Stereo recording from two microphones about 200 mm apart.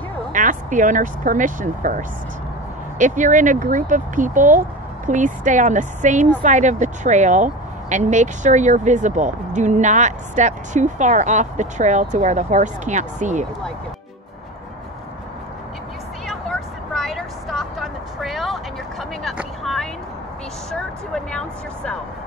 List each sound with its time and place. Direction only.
0.3 s speech: 40° right (ahead or behind)
16.3 s vehicle: centre (ahead or behind)
20.7 s speech: 5° left (ahead or behind)